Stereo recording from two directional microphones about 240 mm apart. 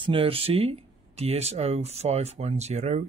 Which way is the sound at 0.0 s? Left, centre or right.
Right.